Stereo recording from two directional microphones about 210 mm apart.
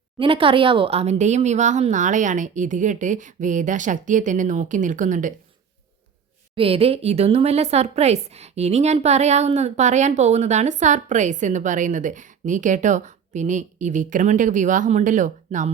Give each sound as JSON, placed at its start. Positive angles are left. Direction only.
{"t": 0.2, "sound": "speech", "side_deg": -25}
{"t": 6.6, "sound": "speech", "side_deg": -25}